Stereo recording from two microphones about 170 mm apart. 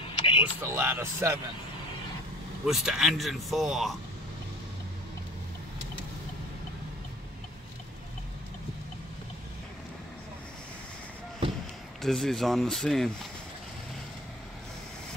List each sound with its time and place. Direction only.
0.0 s a sound: 30° left (ahead or behind)
0.4 s speech: 15° right (ahead or behind)
2.6 s speech: 5° right (ahead or behind)
12.0 s speech: centre (ahead or behind)